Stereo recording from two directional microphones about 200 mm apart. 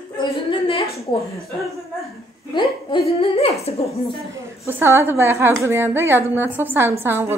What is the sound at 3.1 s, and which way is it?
Speech, 30° left (ahead or behind).